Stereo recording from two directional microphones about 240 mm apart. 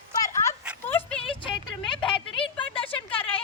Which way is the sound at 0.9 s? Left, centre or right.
Centre.